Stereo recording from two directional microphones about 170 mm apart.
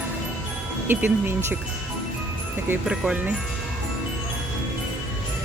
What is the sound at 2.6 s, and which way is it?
Speech, 5° right (ahead or behind).